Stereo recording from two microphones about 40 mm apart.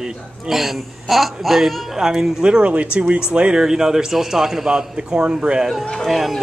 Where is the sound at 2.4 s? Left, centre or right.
Right.